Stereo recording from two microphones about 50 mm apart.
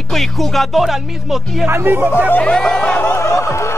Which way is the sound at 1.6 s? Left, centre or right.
Right.